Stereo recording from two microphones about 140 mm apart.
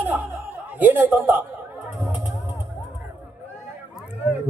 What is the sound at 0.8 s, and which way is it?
Speech, 15° right (ahead or behind).